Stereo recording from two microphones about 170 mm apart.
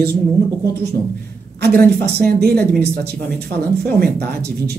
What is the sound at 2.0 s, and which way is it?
Speech, 65° right (ahead or behind).